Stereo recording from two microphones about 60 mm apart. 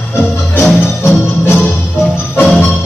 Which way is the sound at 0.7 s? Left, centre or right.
Centre.